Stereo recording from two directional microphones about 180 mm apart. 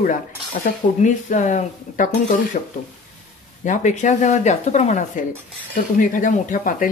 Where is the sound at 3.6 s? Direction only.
45° left (ahead or behind).